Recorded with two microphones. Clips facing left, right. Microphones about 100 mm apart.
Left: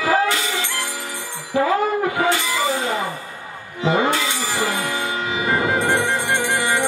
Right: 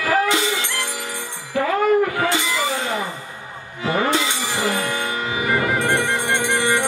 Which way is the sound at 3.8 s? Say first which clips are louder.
Left 2 dB; 20° left (ahead or behind).